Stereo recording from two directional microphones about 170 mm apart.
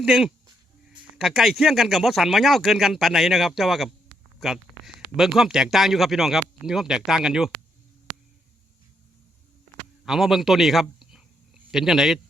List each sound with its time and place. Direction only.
0.0 s speech: 5° right (ahead or behind)
10.1 s speech: centre (ahead or behind)